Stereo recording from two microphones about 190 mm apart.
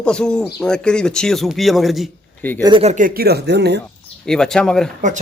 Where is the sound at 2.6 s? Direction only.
25° right (ahead or behind); by 3.8 s 60° right (ahead or behind).